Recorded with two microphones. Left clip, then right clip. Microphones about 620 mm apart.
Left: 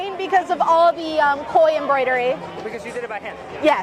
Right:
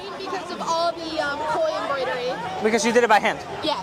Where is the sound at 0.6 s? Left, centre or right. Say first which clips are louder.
Left 4 dB; left.